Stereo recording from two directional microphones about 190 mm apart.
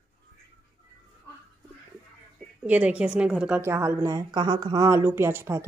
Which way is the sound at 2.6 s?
10° right (ahead or behind).